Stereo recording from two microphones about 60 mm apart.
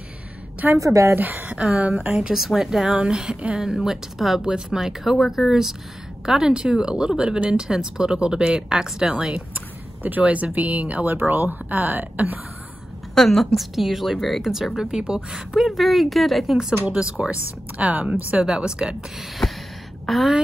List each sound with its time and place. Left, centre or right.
0.7 s a woman's voice: right
1.1 s speech: right
3.6 s speech: centre; by 12.4 s right
13.1 s a woman's voice: centre
16.8 s speech: centre
20.1 s a woman's voice: centre